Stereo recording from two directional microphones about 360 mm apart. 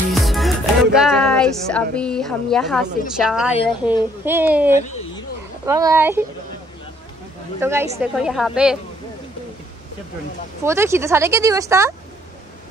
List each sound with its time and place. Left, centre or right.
0.1 s a woman's voice: centre
4.7 s speech: centre
5.7 s speech: centre
7.6 s a woman's voice: centre
10.6 s speech: centre